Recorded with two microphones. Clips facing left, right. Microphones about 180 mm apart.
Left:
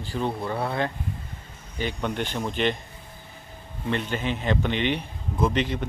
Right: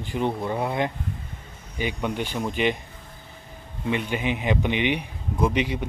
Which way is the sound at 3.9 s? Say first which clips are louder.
Right 2 dB; 10° right (ahead or behind).